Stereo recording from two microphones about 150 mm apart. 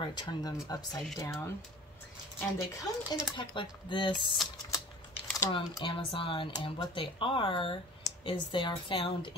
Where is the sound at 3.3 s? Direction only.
30° left (ahead or behind).